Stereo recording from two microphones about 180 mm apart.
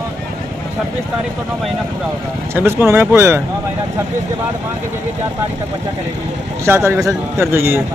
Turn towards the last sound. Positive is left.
turn(degrees=-15)  # may be behind; listen again after turning